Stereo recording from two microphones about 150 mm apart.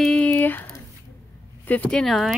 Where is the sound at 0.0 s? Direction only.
5° left (ahead or behind).